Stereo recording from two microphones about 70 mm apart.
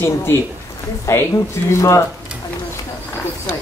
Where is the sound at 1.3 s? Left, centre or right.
Left.